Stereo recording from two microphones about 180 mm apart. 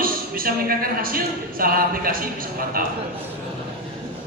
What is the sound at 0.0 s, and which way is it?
Speech, 55° right (ahead or behind).